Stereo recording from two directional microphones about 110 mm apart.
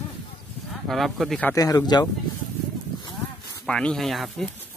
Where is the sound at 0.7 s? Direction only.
Centre (ahead or behind).